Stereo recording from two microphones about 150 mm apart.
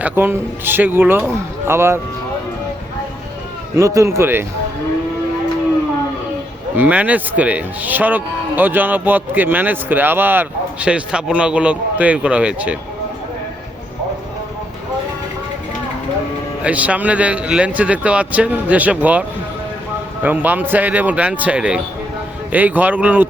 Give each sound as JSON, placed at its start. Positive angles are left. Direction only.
{"t": 0.0, "sound": "speech", "side_deg": -15}
{"t": 3.8, "sound": "a man's voice", "side_deg": -20}
{"t": 6.7, "sound": "speech", "side_deg": -10}
{"t": 16.6, "sound": "speech", "side_deg": -10}
{"t": 20.2, "sound": "speech", "side_deg": -10}